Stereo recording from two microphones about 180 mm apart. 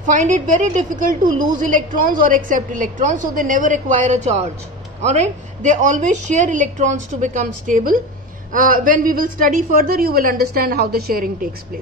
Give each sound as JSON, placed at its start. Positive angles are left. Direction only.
{"t": 0.0, "sound": "a woman's voice", "side_deg": -45}